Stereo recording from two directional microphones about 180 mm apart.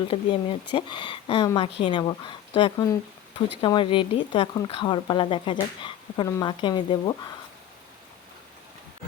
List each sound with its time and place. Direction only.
0.1 s speech: 30° left (ahead or behind)